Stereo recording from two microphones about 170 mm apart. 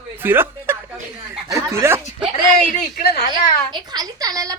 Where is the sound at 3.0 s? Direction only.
65° left (ahead or behind).